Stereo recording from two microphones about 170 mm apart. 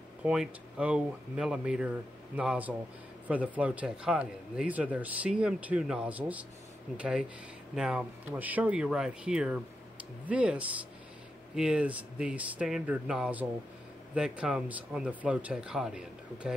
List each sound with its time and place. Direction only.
0.2 s speech: 5° right (ahead or behind)